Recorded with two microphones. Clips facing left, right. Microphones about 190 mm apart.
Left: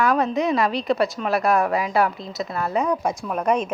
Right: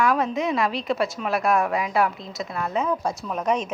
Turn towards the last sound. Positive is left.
turn(degrees=10)  # may be behind; listen again after turning